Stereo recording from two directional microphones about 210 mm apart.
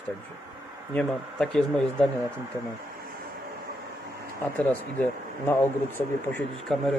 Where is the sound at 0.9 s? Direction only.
5° left (ahead or behind).